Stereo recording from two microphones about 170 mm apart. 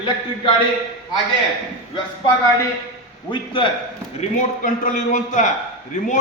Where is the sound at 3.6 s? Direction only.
30° left (ahead or behind).